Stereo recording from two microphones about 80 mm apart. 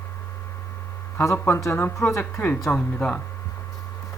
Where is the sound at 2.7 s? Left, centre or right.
Centre.